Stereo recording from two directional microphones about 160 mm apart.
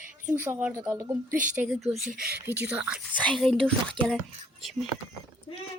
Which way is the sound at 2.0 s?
65° right (ahead or behind).